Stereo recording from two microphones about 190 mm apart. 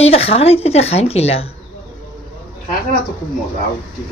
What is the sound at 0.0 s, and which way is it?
Speech, 30° left (ahead or behind).